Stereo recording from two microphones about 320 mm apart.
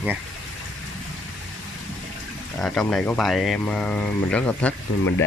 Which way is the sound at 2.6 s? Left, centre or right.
Centre.